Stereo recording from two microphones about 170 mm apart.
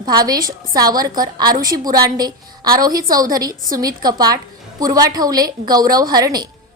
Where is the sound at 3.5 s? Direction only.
55° right (ahead or behind).